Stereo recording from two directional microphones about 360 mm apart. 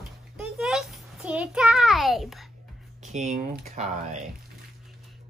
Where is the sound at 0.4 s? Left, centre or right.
Centre.